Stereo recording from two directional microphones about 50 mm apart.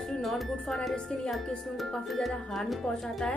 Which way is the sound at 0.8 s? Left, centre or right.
Centre.